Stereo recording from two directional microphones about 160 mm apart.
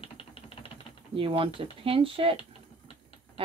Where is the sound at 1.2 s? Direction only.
35° right (ahead or behind).